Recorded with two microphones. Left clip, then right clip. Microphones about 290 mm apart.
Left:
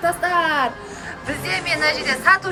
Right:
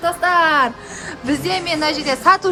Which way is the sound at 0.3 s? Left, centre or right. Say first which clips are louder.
Right 6 dB; right.